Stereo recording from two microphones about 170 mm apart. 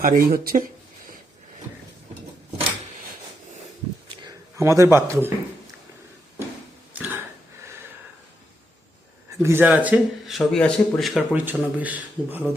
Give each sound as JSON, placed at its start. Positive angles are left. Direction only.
{"t": 0.0, "sound": "speech", "side_deg": -55}
{"t": 4.2, "sound": "speech", "side_deg": -20}
{"t": 6.9, "sound": "throat clearing", "side_deg": -10}
{"t": 9.4, "sound": "speech", "side_deg": -15}